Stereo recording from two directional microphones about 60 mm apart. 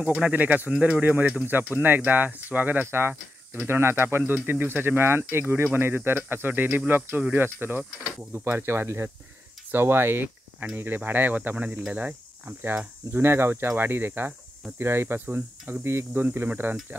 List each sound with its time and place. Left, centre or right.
0.1 s speech: centre
2.9 s speech: right
8.3 s speech: right
13.1 s speech: right